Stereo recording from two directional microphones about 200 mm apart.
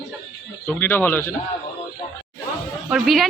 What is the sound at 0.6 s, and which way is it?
Speech, 10° left (ahead or behind).